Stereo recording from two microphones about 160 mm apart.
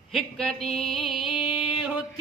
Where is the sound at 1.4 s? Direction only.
35° left (ahead or behind).